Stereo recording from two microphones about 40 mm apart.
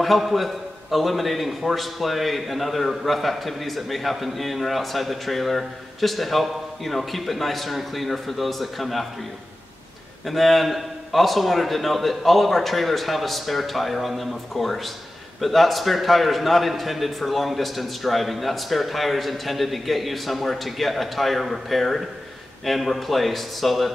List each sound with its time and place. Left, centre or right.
0.0 s a man's voice: centre
10.2 s a man's voice: centre